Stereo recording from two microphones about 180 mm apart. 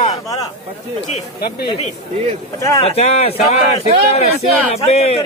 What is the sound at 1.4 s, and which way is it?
Speech, 60° left (ahead or behind).